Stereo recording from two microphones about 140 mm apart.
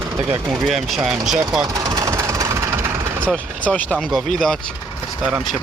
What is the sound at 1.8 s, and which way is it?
Engine, 25° right (ahead or behind).